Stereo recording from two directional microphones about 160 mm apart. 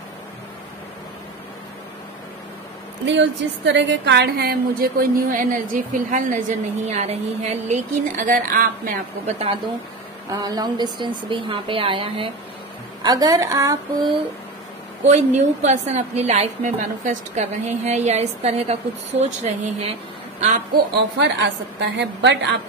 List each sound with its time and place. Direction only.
3.1 s a woman's voice: 90° right; by 8.9 s 60° right (ahead or behind)
9.2 s a woman's voice: 40° right (ahead or behind)
10.3 s a woman's voice: 25° right (ahead or behind)
13.0 s speech: 25° right (ahead or behind)
15.0 s a woman's voice: 45° right (ahead or behind)
21.2 s a woman's voice: 90° right